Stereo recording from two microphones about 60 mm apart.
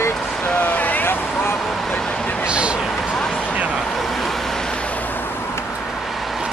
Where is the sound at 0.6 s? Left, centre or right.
Left.